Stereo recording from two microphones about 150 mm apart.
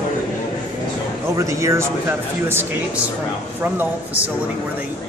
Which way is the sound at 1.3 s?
20° right (ahead or behind).